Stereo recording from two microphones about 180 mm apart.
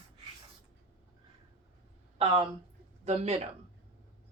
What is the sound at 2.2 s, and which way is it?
Speech, 30° right (ahead or behind).